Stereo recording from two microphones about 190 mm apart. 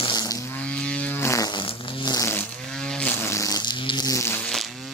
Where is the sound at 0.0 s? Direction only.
20° left (ahead or behind).